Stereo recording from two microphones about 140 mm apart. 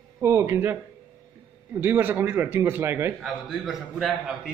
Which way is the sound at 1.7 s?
15° right (ahead or behind).